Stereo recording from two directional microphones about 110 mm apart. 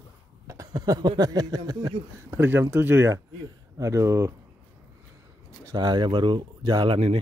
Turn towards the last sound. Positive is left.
turn(degrees=-55)  # may be behind; listen again after turning